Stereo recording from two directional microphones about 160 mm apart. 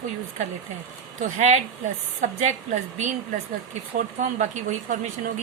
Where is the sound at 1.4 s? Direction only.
45° right (ahead or behind).